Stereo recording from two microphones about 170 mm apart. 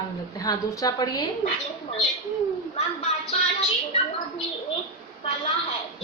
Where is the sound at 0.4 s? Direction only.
20° left (ahead or behind).